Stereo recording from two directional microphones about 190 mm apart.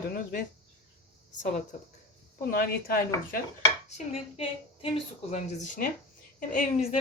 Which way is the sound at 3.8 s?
35° left (ahead or behind).